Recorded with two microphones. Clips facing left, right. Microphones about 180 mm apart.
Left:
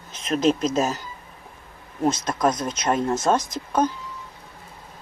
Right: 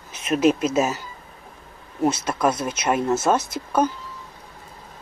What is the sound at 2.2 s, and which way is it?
Speech, 10° right (ahead or behind).